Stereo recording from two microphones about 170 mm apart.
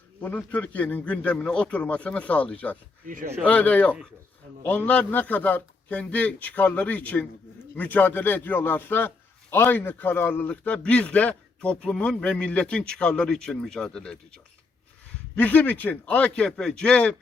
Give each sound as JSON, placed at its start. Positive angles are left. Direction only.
{"t": 0.2, "sound": "a man's voice", "side_deg": 10}
{"t": 3.1, "sound": "speech", "side_deg": -50}
{"t": 3.4, "sound": "a man's voice", "side_deg": 10}
{"t": 15.4, "sound": "a man's voice", "side_deg": 10}